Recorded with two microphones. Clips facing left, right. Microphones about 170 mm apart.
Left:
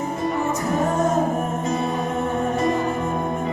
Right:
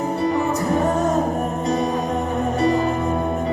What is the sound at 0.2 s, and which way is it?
Music, 35° right (ahead or behind).